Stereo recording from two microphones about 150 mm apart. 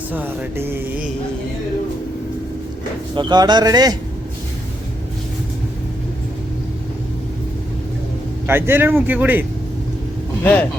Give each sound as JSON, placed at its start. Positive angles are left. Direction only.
{"t": 0.1, "sound": "speech", "side_deg": -10}
{"t": 3.2, "sound": "speech", "side_deg": -30}
{"t": 8.4, "sound": "speech", "side_deg": -15}
{"t": 10.4, "sound": "speech", "side_deg": 10}